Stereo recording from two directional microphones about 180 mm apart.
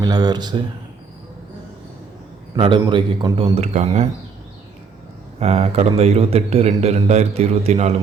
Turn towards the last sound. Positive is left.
turn(degrees=-35)  # may be behind; listen again after turning